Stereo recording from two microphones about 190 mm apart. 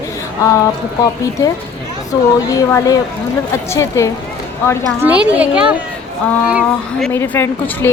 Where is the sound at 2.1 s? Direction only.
20° left (ahead or behind).